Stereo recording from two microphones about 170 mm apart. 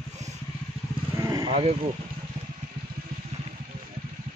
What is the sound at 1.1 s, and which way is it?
Vehicle, 20° right (ahead or behind).